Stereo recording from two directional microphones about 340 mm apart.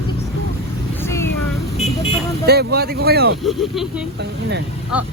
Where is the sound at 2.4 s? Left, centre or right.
Right.